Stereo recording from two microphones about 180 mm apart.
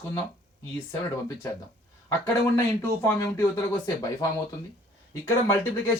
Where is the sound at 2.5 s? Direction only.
15° left (ahead or behind).